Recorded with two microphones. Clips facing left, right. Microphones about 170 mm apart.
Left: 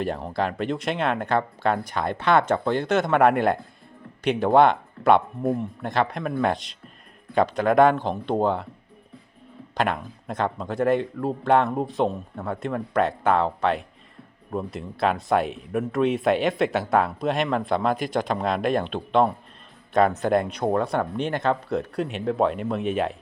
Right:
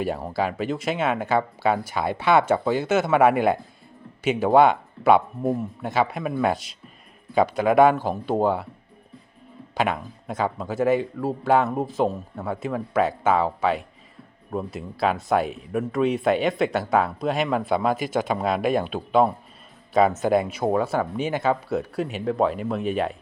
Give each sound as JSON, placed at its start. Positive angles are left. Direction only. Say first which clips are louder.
{"t": 0.0, "sound": "speech", "louder": "right 1 dB", "side_deg": -5}
{"t": 9.7, "sound": "speech", "louder": "right 1 dB", "side_deg": -5}